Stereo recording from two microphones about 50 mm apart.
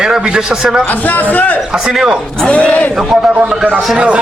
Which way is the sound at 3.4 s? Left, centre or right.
Right.